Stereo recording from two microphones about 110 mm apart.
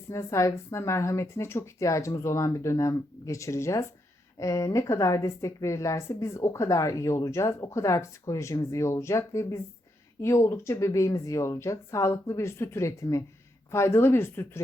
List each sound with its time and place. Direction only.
0.1 s a woman's voice: 25° left (ahead or behind)